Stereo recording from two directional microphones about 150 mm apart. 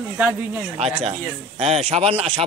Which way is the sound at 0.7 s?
45° right (ahead or behind).